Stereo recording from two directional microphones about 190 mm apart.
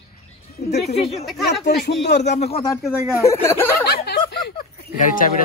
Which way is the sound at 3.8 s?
55° left (ahead or behind).